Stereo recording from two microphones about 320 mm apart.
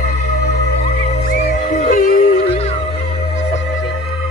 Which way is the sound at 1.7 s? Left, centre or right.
Left.